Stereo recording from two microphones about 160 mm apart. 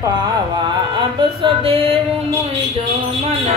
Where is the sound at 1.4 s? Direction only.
35° right (ahead or behind).